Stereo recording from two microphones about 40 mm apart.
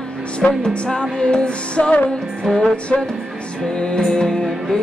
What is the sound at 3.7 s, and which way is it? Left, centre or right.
Music, centre.